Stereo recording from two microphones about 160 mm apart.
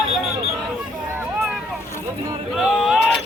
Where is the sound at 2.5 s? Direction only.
Centre (ahead or behind).